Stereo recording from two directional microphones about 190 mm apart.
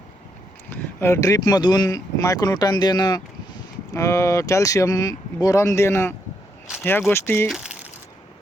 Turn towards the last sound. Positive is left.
turn(degrees=-5)  # may be behind; listen again after turning